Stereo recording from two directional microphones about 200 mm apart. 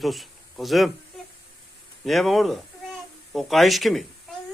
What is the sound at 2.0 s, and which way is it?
Speech, centre (ahead or behind).